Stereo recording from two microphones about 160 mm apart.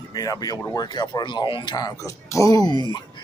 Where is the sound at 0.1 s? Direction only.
25° left (ahead or behind).